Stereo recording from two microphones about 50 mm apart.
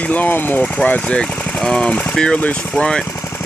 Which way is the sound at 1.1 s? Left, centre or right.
Centre.